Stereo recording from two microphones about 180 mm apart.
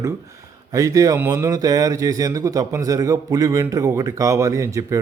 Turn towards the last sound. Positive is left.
turn(degrees=-15)  # may be behind; listen again after turning